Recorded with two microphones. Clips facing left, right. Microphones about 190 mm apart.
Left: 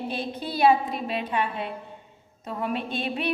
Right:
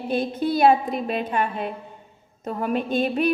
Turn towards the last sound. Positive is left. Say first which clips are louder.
# right 7 dB
turn(degrees=-45)  # may be behind; listen again after turning